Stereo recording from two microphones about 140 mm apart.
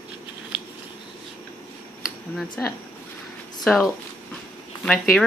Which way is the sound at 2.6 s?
15° left (ahead or behind).